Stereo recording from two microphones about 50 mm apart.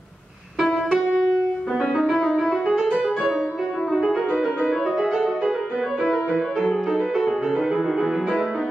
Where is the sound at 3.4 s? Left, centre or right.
Centre.